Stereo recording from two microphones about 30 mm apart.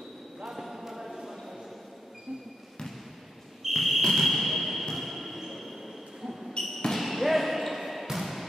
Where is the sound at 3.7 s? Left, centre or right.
Centre.